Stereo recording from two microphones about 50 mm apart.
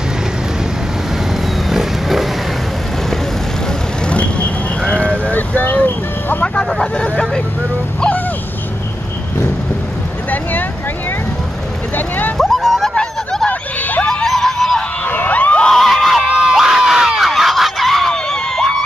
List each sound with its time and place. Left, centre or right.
1.7 s wild animals: centre
4.8 s sheep: left
5.3 s vehicle: left
6.4 s vehicle: centre
12.4 s a sound: centre
13.5 s a sound: left
14.0 s music: centre
15.0 s crowd: left
15.6 s screaming: centre
16.3 s crowd: centre
18.1 s screaming: centre